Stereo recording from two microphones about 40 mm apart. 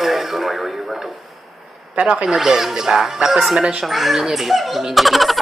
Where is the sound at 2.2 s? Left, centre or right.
Centre.